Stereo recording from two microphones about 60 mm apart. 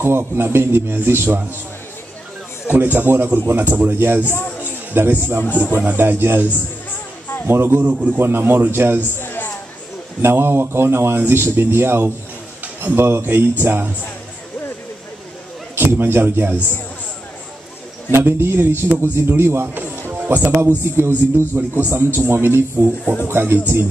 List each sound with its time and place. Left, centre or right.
0.0 s speech: right
2.7 s speech: right
4.2 s a man's voice: left
4.6 s music: right
5.4 s a man's voice: left
5.9 s speech: right
7.4 s speech: right
9.1 s a sound: left
10.2 s speech: right
15.7 s a man's voice: right
18.1 s speech: right